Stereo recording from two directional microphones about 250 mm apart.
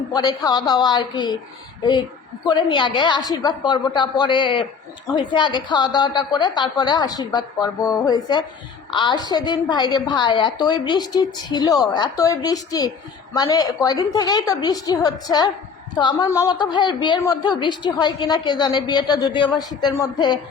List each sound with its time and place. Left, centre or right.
0.1 s a woman's voice: centre